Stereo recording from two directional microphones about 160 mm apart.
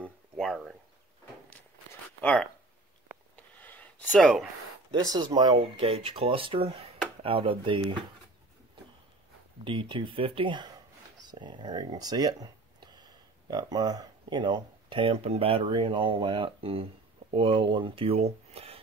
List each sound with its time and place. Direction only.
0.4 s a sound: centre (ahead or behind)
2.2 s speech: 10° left (ahead or behind)
3.3 s sniff: 10° left (ahead or behind)
4.1 s speech: centre (ahead or behind)
4.9 s speech: 25° right (ahead or behind)
9.7 s speech: 30° right (ahead or behind)